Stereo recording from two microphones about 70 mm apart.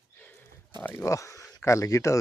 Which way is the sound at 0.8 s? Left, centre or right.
Left.